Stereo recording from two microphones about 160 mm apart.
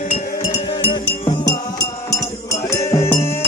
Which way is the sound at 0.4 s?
35° left (ahead or behind).